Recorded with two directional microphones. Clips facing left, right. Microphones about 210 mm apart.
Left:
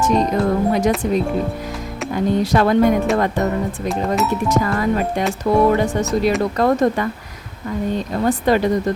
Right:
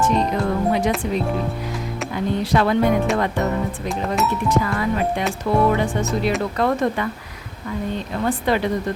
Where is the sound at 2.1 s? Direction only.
45° left (ahead or behind).